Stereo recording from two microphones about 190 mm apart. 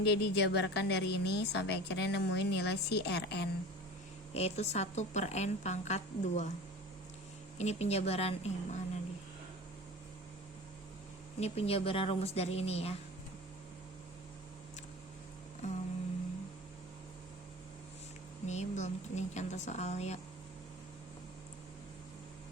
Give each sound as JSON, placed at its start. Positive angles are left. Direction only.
{"t": 0.0, "sound": "a woman's voice", "side_deg": 65}
{"t": 4.4, "sound": "a woman's voice", "side_deg": 35}
{"t": 7.6, "sound": "a woman's voice", "side_deg": 35}
{"t": 11.3, "sound": "a woman's voice", "side_deg": 35}
{"t": 15.6, "sound": "a woman's voice", "side_deg": 40}
{"t": 18.4, "sound": "a woman's voice", "side_deg": 35}